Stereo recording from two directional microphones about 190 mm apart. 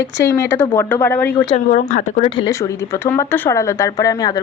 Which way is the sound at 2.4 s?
15° left (ahead or behind).